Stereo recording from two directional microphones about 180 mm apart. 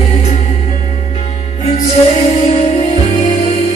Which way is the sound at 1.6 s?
35° left (ahead or behind).